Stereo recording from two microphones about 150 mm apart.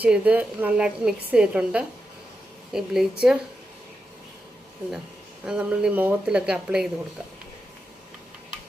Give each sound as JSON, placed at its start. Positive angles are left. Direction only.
{"t": 0.0, "sound": "a woman's voice", "side_deg": -10}
{"t": 5.5, "sound": "a woman's voice", "side_deg": -5}